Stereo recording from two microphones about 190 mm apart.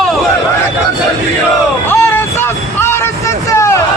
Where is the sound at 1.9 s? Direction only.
10° left (ahead or behind).